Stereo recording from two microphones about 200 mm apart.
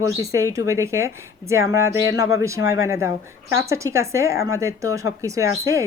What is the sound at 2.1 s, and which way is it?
Speech, 15° right (ahead or behind).